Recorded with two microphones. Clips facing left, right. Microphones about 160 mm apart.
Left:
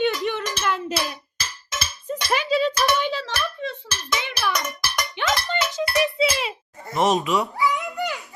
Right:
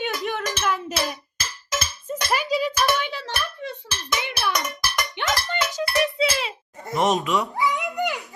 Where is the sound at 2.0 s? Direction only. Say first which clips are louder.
Left 2 dB; 5° right (ahead or behind).